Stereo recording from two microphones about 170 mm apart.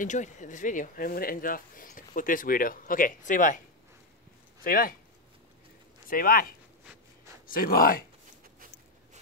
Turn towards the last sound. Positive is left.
turn(degrees=60)  # may be behind; listen again after turning